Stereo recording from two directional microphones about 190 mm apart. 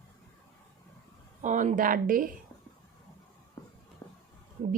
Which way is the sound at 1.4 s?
40° right (ahead or behind).